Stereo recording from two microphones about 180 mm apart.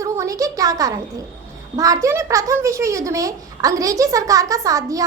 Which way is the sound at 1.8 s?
20° right (ahead or behind).